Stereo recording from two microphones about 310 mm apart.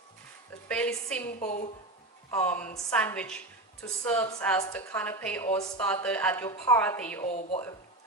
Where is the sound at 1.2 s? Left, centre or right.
Left.